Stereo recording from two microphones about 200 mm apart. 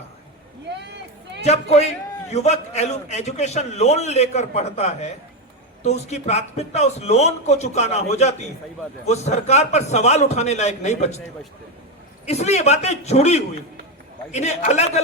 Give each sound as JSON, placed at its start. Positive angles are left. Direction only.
{"t": 0.7, "sound": "a sound", "side_deg": -60}
{"t": 1.4, "sound": "a man's voice", "side_deg": 35}
{"t": 12.2, "sound": "a man's voice", "side_deg": 35}